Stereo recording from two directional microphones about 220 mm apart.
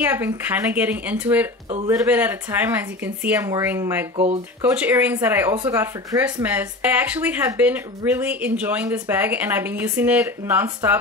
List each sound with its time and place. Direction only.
0.0 s speech: 10° right (ahead or behind)
4.2 s speech: 30° right (ahead or behind)
4.7 s speech: 5° right (ahead or behind)